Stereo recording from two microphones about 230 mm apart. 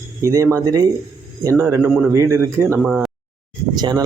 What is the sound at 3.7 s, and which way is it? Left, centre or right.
Speech, centre.